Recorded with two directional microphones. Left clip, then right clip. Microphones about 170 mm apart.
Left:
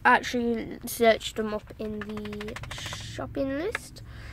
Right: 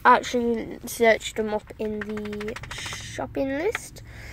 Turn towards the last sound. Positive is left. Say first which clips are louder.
# right 4 dB
turn(degrees=-15)  # may be behind; listen again after turning